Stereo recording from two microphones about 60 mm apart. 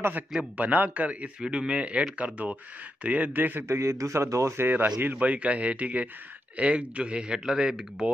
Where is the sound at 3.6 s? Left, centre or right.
Right.